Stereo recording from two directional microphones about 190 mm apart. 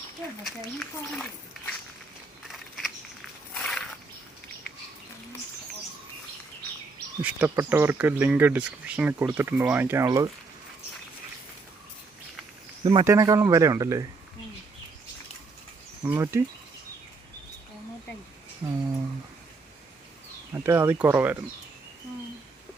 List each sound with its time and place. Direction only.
0.4 s speech: centre (ahead or behind)
2.5 s a sound: centre (ahead or behind)
7.2 s speech: 10° right (ahead or behind)
12.8 s speech: 25° right (ahead or behind)
16.0 s speech: 15° right (ahead or behind)
18.6 s a sound: 20° right (ahead or behind)
20.5 s speech: 15° right (ahead or behind)